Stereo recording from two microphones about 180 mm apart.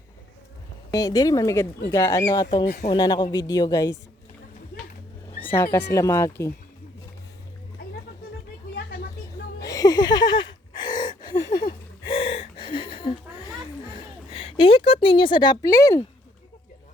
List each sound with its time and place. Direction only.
0.9 s speech: 20° left (ahead or behind)
2.6 s speech: 50° left (ahead or behind)
2.9 s speech: 20° left (ahead or behind)
5.5 s speech: 15° left (ahead or behind)
9.6 s gasp: 20° left (ahead or behind)
11.5 s a sound: 30° left (ahead or behind)